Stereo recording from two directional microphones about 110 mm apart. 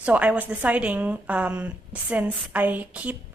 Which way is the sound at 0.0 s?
15° right (ahead or behind).